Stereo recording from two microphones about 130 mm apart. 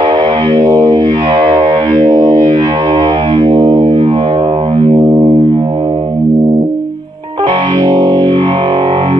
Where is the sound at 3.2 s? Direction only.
40° right (ahead or behind).